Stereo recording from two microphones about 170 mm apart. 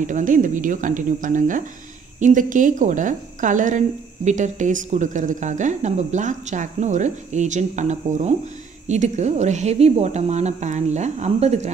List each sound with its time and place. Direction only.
0.0 s a woman's voice: 50° right (ahead or behind)